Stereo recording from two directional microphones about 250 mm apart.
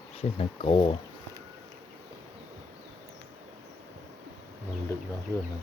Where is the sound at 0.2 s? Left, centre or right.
Left.